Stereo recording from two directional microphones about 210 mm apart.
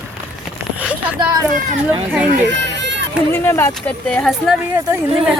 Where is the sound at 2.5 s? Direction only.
55° right (ahead or behind).